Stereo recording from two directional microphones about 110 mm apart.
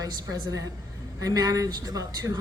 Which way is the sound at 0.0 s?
35° right (ahead or behind).